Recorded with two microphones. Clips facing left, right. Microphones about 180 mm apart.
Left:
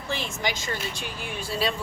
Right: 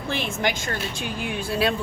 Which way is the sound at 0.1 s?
60° right (ahead or behind).